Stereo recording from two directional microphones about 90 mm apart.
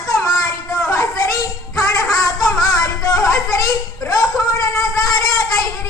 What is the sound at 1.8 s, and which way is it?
Music, 40° left (ahead or behind).